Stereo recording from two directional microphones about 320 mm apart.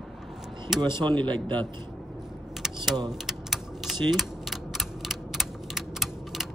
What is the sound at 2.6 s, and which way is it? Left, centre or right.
Typing, centre.